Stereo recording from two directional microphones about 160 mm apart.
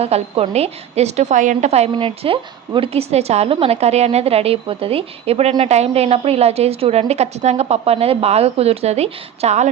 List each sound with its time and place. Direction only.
0.0 s a woman's voice: 40° right (ahead or behind)